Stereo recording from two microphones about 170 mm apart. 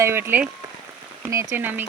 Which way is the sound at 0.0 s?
15° right (ahead or behind).